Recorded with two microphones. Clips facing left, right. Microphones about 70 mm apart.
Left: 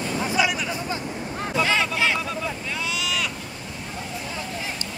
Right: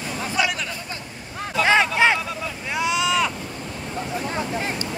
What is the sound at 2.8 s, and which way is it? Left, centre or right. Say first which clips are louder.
Vehicle: right 8 dB; right.